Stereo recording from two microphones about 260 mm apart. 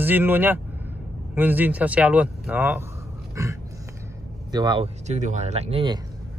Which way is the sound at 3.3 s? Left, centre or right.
Centre.